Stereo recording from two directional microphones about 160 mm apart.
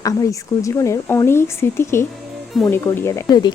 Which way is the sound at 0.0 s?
20° left (ahead or behind).